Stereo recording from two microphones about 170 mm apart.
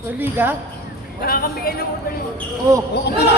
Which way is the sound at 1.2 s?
60° left (ahead or behind).